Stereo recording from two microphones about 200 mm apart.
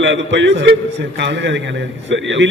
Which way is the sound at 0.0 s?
65° right (ahead or behind).